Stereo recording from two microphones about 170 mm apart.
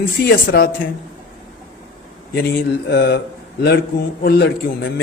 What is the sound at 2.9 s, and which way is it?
Speech, 75° left (ahead or behind).